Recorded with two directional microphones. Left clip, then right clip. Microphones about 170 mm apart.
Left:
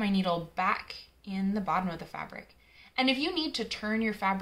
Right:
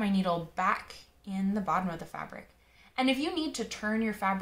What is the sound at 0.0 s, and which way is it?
A woman's voice, 5° left (ahead or behind).